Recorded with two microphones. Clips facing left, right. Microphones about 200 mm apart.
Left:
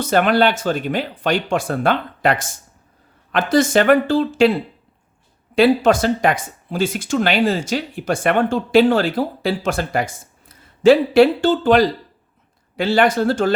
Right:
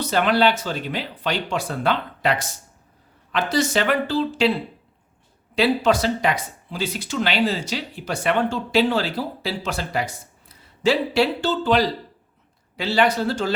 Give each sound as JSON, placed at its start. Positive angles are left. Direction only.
{"t": 0.0, "sound": "speech", "side_deg": 50}
{"t": 5.5, "sound": "speech", "side_deg": 50}